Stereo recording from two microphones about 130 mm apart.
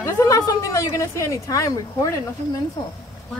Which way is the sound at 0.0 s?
25° left (ahead or behind).